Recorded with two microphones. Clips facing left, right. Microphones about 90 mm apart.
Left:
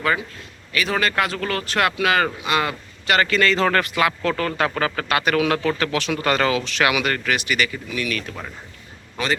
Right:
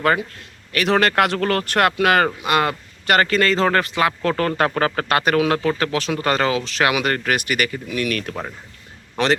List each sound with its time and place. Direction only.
0.0 s a man's voice: 50° right (ahead or behind)
9.2 s a man's voice: 70° right (ahead or behind)